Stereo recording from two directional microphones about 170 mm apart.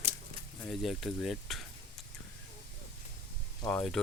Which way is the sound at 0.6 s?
Centre (ahead or behind).